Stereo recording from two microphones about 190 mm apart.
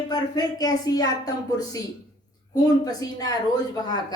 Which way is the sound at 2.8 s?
20° left (ahead or behind).